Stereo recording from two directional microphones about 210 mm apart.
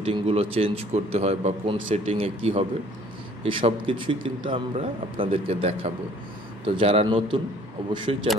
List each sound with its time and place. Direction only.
0.0 s a man's voice: 30° right (ahead or behind)